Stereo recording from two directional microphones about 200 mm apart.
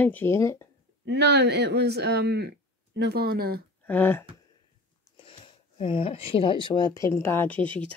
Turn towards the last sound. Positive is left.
turn(degrees=10)  # may be behind; listen again after turning